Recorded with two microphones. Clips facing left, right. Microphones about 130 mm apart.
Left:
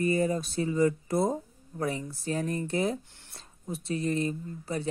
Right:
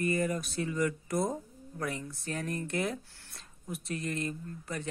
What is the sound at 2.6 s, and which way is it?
Speech, 30° left (ahead or behind).